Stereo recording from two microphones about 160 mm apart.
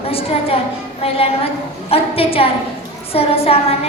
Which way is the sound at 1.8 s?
35° left (ahead or behind).